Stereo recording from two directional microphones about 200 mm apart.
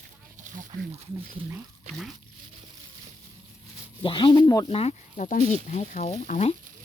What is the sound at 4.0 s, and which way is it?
Speech, 25° left (ahead or behind).